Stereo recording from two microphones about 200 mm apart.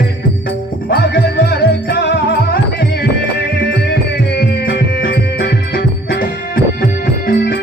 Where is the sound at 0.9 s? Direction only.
60° left (ahead or behind).